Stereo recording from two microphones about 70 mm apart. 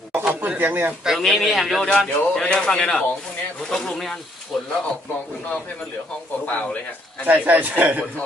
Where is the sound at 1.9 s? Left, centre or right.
Centre.